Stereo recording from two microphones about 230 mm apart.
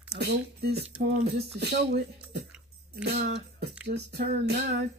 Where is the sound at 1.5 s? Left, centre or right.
Right.